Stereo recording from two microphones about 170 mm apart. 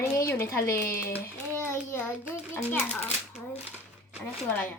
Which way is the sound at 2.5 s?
10° left (ahead or behind).